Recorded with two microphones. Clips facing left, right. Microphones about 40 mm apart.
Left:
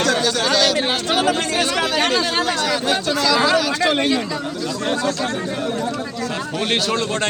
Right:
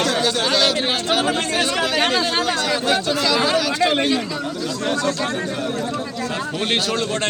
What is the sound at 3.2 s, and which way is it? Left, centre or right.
Speech, right.